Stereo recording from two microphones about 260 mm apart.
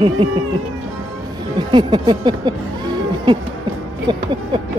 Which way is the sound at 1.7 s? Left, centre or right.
Centre.